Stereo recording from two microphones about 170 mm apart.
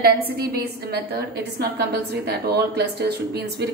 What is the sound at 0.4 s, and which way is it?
A woman's voice, 65° right (ahead or behind).